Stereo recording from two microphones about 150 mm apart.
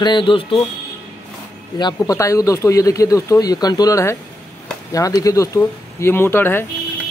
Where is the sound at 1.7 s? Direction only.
25° left (ahead or behind).